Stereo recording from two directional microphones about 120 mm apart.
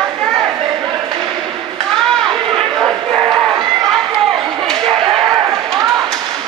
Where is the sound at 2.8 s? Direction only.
15° right (ahead or behind).